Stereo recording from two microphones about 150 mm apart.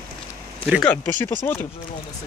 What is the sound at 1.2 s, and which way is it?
Speech, 15° left (ahead or behind).